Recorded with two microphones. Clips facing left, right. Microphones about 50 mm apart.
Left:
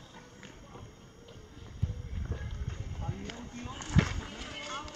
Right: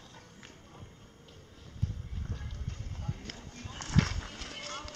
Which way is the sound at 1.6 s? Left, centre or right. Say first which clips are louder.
Even; centre.